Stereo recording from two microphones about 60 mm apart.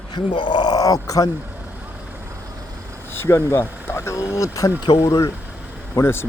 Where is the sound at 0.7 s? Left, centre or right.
Left.